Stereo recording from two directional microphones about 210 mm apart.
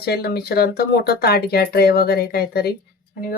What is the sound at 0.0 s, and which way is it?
Speech, 50° left (ahead or behind).